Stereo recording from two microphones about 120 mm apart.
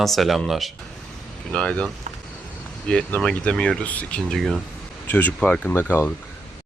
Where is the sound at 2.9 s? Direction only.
10° left (ahead or behind).